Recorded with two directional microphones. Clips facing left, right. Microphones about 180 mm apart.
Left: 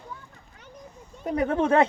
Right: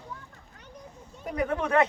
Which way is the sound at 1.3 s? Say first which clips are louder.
Left 4 dB; 30° left (ahead or behind).